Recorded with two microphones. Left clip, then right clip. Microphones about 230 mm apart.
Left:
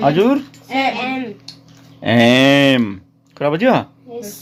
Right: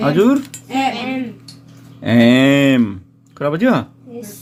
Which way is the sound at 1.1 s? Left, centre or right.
Left.